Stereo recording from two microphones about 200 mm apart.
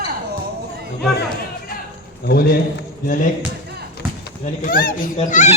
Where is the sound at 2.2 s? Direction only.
50° left (ahead or behind).